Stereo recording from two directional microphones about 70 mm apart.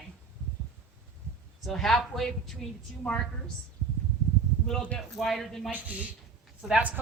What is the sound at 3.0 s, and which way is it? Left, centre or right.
Speech, centre.